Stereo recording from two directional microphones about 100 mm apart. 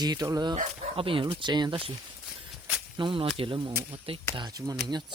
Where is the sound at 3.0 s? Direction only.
60° right (ahead or behind).